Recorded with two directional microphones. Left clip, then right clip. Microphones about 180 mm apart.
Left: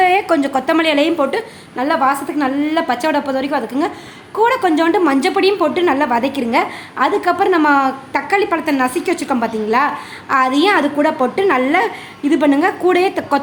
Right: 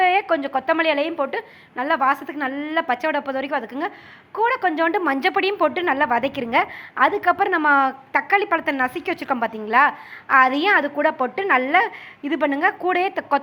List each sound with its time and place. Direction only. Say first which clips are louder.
0.0 s a woman's voice: left 5 dB; 5° left (ahead or behind)